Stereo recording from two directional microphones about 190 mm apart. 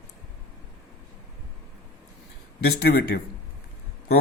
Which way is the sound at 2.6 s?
60° left (ahead or behind).